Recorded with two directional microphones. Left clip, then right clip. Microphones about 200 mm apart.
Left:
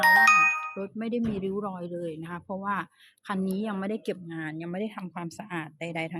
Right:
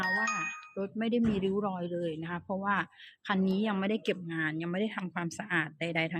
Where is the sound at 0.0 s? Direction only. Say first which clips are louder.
Left 12 dB; 50° left (ahead or behind).